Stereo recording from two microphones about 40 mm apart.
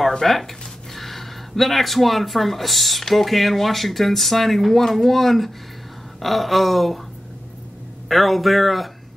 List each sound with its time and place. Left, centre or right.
0.2 s speech: centre
8.1 s speech: centre